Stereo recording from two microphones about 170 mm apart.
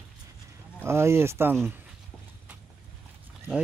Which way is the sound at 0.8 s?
15° right (ahead or behind).